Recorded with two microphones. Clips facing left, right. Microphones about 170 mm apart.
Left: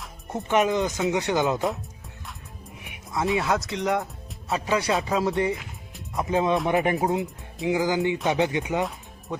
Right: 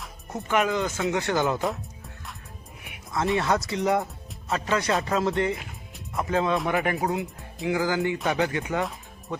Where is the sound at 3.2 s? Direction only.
5° left (ahead or behind).